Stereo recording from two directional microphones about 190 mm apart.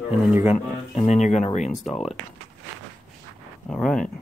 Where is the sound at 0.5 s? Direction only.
35° left (ahead or behind).